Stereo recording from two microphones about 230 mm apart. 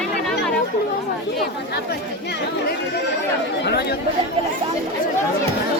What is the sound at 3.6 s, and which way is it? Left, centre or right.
Chatter, left.